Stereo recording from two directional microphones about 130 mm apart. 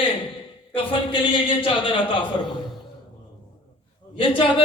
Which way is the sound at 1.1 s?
40° left (ahead or behind).